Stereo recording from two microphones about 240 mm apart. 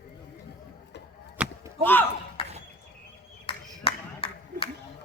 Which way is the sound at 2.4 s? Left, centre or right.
Left.